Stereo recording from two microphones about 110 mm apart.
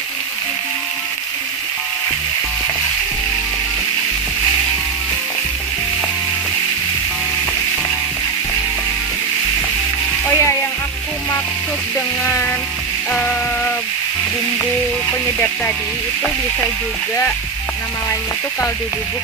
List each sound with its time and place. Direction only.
10.2 s music: 25° left (ahead or behind)
15.0 s frying: 15° left (ahead or behind)